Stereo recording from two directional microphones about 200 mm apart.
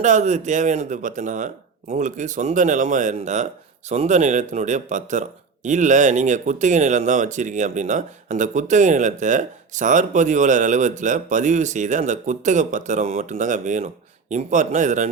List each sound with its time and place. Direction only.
0.0 s speech: 35° right (ahead or behind)